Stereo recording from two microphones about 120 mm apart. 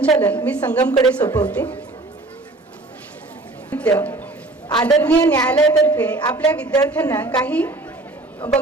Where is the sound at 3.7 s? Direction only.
10° left (ahead or behind).